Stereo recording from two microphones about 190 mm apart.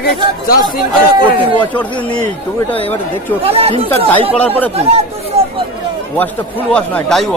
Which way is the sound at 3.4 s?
30° right (ahead or behind).